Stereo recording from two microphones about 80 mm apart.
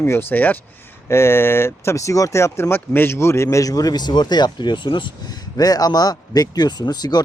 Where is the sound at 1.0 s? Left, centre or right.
Left.